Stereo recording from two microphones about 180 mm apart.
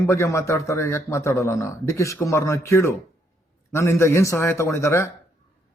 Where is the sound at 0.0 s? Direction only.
15° left (ahead or behind).